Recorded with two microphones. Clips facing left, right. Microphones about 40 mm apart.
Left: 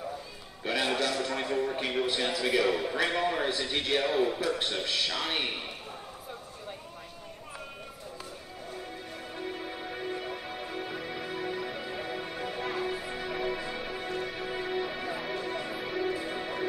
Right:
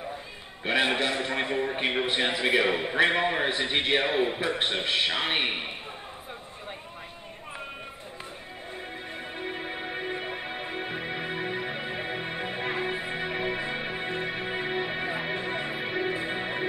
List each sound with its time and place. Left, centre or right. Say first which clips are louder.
0.7 s a man's voice: right 4 dB; right
9.4 s music: right 3 dB; right